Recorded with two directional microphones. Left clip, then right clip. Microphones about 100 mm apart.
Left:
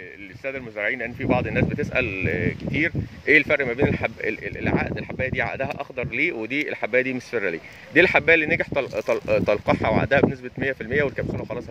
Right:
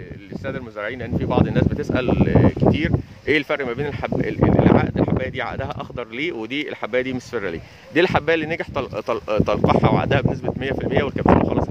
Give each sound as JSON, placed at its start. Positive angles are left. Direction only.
{"t": 0.5, "sound": "speech", "side_deg": -35}